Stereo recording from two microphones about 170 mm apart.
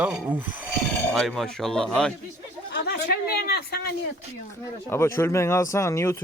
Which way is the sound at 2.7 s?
75° left (ahead or behind).